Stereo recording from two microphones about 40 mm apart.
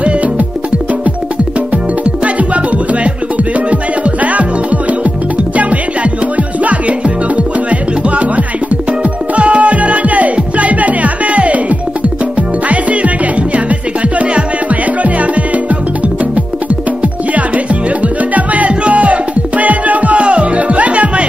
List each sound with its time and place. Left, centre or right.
2.2 s music: right
4.2 s music: right
6.3 s music: right
9.3 s music: right
18.0 s music: right